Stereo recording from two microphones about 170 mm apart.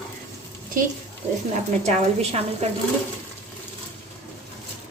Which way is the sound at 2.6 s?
40° right (ahead or behind).